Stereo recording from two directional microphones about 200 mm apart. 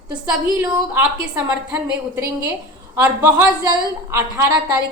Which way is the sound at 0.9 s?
10° right (ahead or behind).